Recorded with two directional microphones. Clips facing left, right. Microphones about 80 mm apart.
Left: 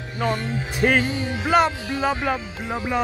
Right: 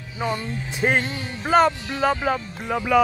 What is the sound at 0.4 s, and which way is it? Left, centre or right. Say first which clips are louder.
Music: left 3 dB; left.